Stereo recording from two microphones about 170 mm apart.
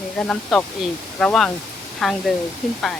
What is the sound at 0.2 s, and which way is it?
Speech, 5° left (ahead or behind).